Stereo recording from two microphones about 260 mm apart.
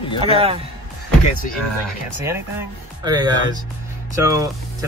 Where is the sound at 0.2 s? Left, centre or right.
Right.